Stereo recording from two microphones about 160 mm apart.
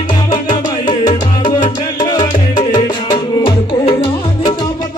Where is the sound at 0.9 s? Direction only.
30° left (ahead or behind).